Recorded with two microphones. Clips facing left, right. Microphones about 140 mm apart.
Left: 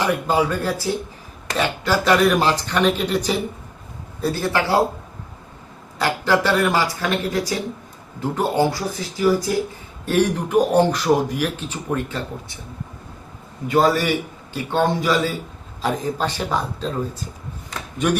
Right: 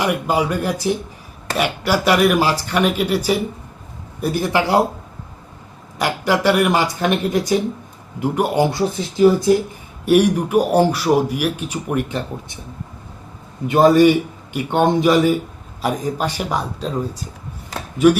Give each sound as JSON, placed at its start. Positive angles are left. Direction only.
{"t": 0.0, "sound": "speech", "side_deg": -10}
{"t": 6.0, "sound": "speech", "side_deg": -15}
{"t": 10.1, "sound": "speech", "side_deg": -10}
{"t": 13.7, "sound": "a man's voice", "side_deg": -20}